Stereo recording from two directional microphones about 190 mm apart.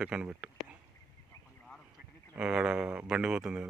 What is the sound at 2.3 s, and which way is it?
Speech, 5° right (ahead or behind).